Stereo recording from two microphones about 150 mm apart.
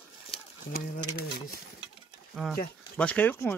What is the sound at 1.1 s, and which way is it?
Speech, 90° left.